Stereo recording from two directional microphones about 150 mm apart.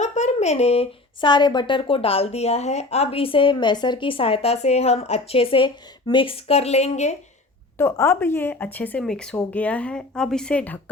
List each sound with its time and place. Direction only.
0.0 s speech: 50° left (ahead or behind)
7.8 s speech: 20° left (ahead or behind)